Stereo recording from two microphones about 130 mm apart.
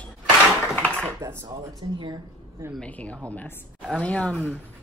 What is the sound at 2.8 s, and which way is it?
Speech, 10° left (ahead or behind).